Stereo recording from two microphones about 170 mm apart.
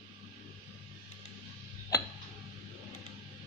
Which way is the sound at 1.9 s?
20° left (ahead or behind).